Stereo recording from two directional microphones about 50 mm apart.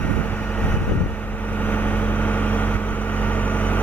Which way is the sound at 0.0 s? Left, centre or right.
Left.